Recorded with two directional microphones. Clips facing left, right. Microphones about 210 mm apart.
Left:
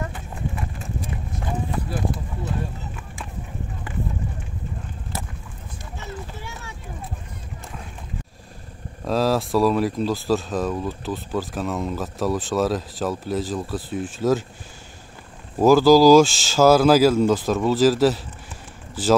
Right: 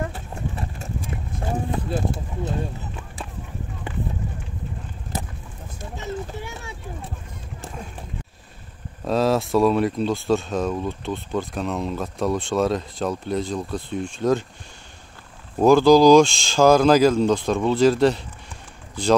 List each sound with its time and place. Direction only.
0.1 s clip-clop: 40° right (ahead or behind)
1.7 s speech: 25° right (ahead or behind)
9.0 s speech: centre (ahead or behind)
15.6 s speech: 5° left (ahead or behind)